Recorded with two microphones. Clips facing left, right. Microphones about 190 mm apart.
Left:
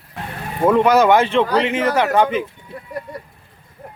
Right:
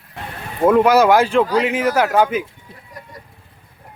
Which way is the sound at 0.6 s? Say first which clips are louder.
Right 1 dB; 5° right (ahead or behind).